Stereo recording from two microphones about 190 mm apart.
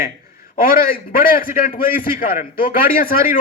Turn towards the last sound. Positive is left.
turn(degrees=50)  # may be behind; listen again after turning